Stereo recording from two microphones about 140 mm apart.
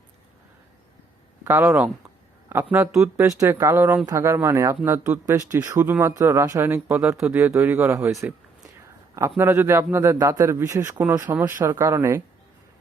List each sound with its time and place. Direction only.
1.5 s speech: 15° right (ahead or behind)
3.2 s a man's voice: 20° right (ahead or behind)
9.4 s a man's voice: 15° right (ahead or behind)